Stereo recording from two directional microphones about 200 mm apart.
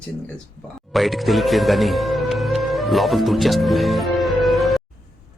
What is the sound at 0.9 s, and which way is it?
Speech, centre (ahead or behind).